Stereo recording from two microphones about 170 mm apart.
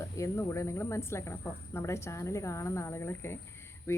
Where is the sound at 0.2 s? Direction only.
15° left (ahead or behind).